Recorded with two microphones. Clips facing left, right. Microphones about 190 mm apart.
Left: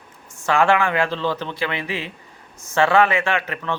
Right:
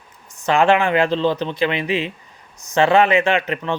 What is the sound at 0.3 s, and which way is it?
A man's voice, 20° right (ahead or behind).